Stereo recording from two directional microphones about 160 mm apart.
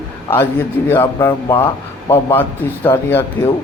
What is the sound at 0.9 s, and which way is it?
A man's voice, 15° left (ahead or behind).